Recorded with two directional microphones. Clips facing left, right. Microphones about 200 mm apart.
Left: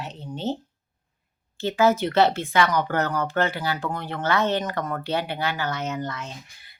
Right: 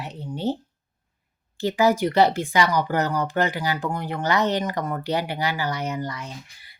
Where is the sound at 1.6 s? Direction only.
15° right (ahead or behind).